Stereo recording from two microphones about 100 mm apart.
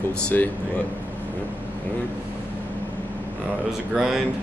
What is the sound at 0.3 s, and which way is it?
Speech, 15° left (ahead or behind).